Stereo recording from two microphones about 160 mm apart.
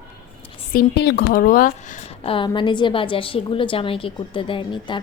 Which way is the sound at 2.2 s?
35° left (ahead or behind).